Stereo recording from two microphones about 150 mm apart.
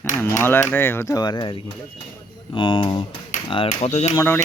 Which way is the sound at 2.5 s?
35° left (ahead or behind).